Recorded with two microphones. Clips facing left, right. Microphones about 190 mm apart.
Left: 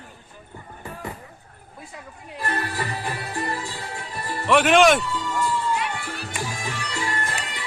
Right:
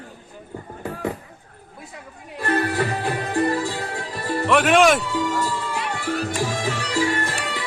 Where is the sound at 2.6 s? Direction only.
65° right (ahead or behind); by 4.4 s 80° right.